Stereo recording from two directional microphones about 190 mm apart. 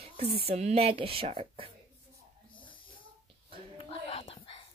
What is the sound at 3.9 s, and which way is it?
Whispering, 30° left (ahead or behind).